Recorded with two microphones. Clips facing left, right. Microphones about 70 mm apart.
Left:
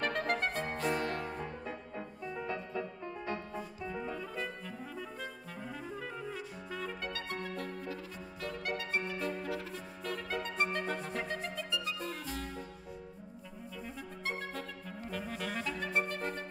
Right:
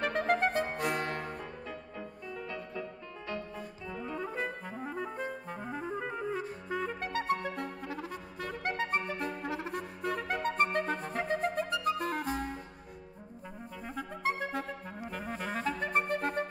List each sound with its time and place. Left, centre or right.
0.0 s music: centre
0.7 s music: right
1.0 s music: right
1.4 s music: left
4.2 s clarinet: right
5.9 s clarinet: right
6.2 s clarinet: right
7.4 s music: right
8.9 s clarinet: right
10.1 s music: right
10.9 s clarinet: right
13.8 s clarinet: right
15.0 s clarinet: centre
15.4 s clarinet: right